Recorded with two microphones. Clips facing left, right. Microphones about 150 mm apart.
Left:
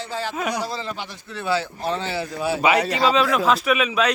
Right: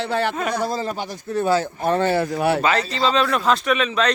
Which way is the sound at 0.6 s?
45° right (ahead or behind).